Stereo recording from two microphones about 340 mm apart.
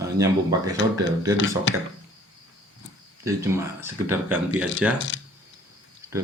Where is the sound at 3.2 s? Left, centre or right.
Centre.